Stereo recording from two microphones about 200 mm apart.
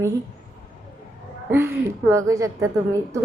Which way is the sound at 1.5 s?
10° right (ahead or behind).